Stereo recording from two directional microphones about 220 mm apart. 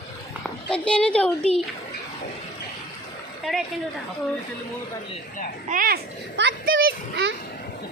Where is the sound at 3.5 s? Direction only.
Centre (ahead or behind).